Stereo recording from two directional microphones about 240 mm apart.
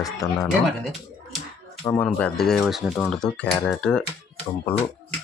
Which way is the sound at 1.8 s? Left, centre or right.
Centre.